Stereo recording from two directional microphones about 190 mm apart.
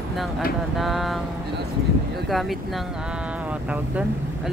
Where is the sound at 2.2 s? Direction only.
Centre (ahead or behind).